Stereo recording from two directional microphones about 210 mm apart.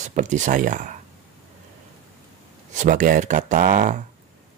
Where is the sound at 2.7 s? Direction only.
35° right (ahead or behind).